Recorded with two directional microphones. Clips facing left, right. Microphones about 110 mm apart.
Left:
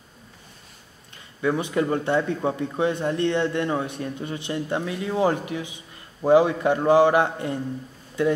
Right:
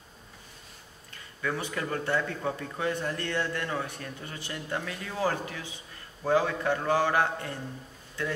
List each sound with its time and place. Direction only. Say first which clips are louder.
1.1 s a man's voice: left 9 dB; 20° left (ahead or behind)